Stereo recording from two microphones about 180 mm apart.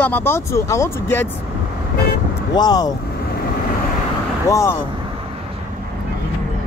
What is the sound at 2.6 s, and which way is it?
Speech, 20° left (ahead or behind).